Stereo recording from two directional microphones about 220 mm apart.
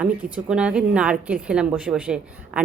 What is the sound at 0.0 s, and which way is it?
A woman's voice, 5° right (ahead or behind).